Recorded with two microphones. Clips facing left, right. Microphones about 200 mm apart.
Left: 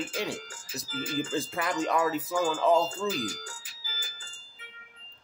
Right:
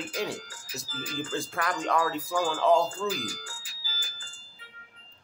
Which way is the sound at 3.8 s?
20° left (ahead or behind).